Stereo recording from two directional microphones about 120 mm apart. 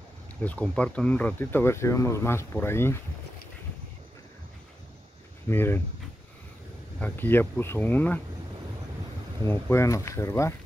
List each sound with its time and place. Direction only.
0.4 s speech: 10° left (ahead or behind)
5.5 s speech: 20° left (ahead or behind)
7.0 s speech: 15° left (ahead or behind)
9.4 s speech: 20° left (ahead or behind)